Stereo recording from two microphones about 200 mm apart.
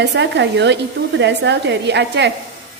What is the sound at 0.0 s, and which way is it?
A woman's voice, 60° right (ahead or behind).